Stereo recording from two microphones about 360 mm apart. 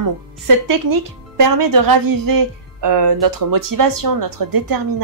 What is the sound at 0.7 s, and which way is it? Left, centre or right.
Speech, right.